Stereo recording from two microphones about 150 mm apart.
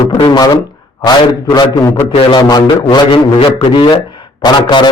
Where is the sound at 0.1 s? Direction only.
30° left (ahead or behind).